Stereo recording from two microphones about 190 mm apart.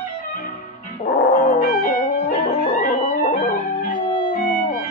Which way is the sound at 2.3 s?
45° left (ahead or behind).